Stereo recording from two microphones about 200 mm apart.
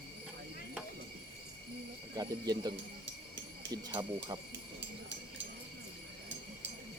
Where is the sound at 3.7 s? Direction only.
20° right (ahead or behind).